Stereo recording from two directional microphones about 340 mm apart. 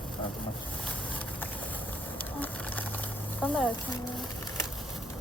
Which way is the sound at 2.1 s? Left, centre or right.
Centre.